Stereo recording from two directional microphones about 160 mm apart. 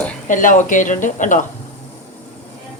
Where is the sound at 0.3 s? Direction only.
55° left (ahead or behind).